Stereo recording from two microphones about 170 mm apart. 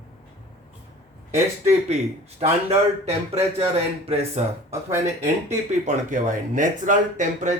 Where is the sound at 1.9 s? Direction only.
40° right (ahead or behind).